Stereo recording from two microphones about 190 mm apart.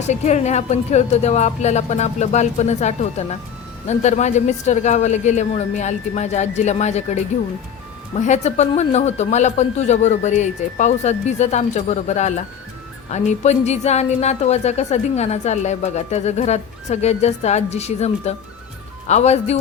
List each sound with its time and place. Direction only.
0.1 s a woman's voice: 35° left (ahead or behind)